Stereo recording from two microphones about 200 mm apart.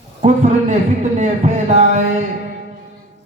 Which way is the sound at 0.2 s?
40° right (ahead or behind).